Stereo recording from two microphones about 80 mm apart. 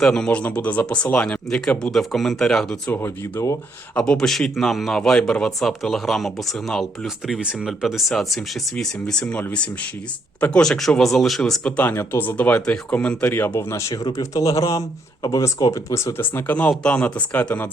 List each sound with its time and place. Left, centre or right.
0.0 s speech: centre
2.9 s speech: left
3.9 s speech: centre
10.6 s speech: centre
11.6 s speech: left
13.3 s speech: left
13.9 s speech: left
16.6 s speech: centre